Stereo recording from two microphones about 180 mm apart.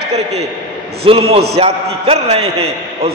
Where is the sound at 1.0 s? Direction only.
30° right (ahead or behind).